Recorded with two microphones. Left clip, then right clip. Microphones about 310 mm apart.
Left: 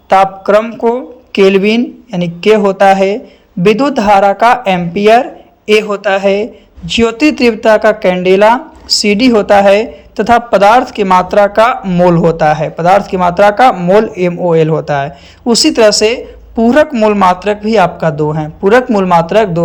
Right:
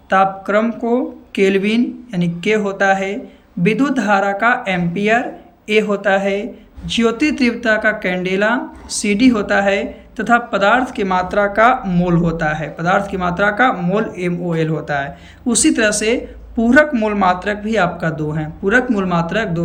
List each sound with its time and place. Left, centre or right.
0.1 s speech: centre